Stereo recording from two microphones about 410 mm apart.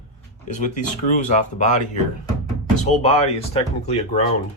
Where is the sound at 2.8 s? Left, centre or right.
Centre.